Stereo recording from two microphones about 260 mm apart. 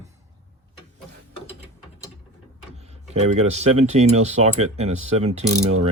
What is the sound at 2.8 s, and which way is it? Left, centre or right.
Speech, right.